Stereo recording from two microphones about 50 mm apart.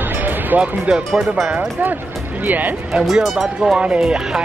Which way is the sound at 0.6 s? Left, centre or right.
Centre.